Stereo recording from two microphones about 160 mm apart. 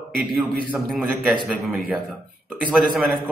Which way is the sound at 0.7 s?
Centre (ahead or behind).